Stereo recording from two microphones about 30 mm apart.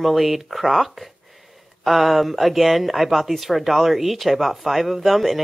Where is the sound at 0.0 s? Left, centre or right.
Centre.